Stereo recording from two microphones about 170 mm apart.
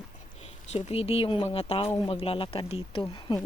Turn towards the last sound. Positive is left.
turn(degrees=30)  # may be behind; listen again after turning